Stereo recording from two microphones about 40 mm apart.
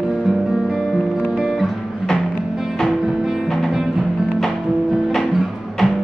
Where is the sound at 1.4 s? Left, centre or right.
Centre.